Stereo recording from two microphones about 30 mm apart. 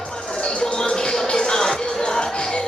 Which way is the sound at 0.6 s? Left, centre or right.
Left.